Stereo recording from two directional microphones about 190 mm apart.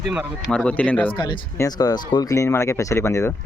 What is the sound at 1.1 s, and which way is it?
Speech, 25° left (ahead or behind).